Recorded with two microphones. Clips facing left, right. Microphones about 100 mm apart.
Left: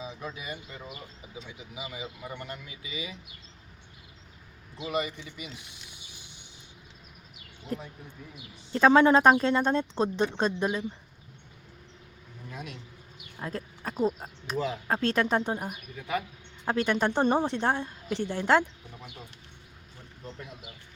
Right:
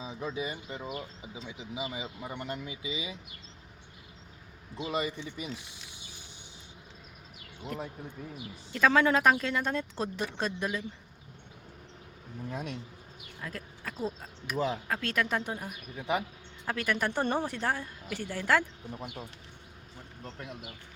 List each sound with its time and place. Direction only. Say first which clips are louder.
0.0 s bird: even; 25° right (ahead or behind)
0.3 s speech: right 4 dB; 25° right (ahead or behind)
4.9 s speech: left 2 dB; 25° right (ahead or behind)
7.7 s speech: left 2 dB; 35° left (ahead or behind)
12.5 s speech: right 4 dB; 30° right (ahead or behind)
13.4 s a sound: left 5 dB; 30° left (ahead or behind)
13.9 s speech: left 8 dB; 25° left (ahead or behind)
16.0 s speech: right 1 dB; 25° right (ahead or behind)
16.6 s speech: left 5 dB; 25° left (ahead or behind)